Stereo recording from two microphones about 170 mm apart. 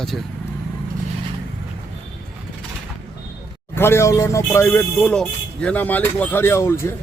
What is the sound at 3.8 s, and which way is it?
A man's voice, 15° left (ahead or behind).